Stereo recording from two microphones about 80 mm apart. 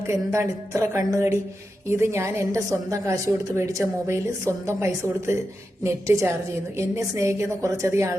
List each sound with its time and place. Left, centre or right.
0.1 s a woman's voice: right